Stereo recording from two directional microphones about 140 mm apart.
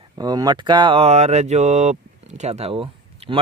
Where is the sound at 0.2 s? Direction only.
30° right (ahead or behind).